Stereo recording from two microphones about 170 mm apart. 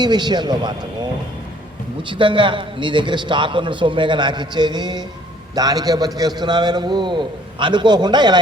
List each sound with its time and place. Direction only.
0.0 s a man's voice: 25° right (ahead or behind)
2.0 s a man's voice: 30° right (ahead or behind)